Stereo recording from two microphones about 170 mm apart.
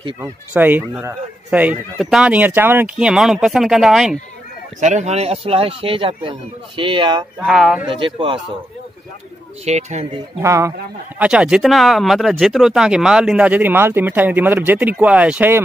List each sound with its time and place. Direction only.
0.2 s speech: 10° right (ahead or behind)
4.7 s speech: 40° right (ahead or behind)
7.4 s speech: centre (ahead or behind)
7.8 s speech: 30° right (ahead or behind)
9.7 s speech: 40° right (ahead or behind)
10.4 s speech: 15° right (ahead or behind)
11.1 s speech: 5° right (ahead or behind)